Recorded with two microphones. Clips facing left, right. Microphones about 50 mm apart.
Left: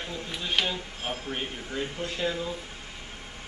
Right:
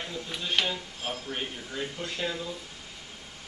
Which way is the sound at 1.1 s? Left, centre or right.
Left.